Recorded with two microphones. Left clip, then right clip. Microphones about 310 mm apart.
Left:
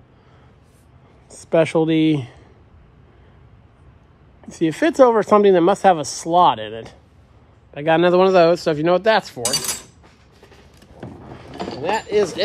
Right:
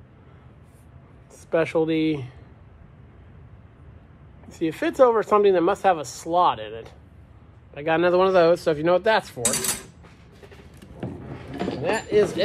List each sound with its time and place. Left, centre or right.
1.5 s speech: left
4.5 s speech: left
11.8 s a sound: left